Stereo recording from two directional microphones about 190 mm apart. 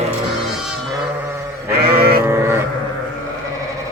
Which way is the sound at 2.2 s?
10° right (ahead or behind).